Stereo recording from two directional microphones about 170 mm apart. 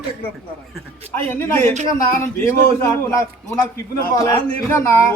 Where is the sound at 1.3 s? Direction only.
15° left (ahead or behind).